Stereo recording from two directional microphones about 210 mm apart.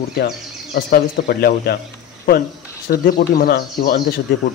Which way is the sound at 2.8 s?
45° left (ahead or behind).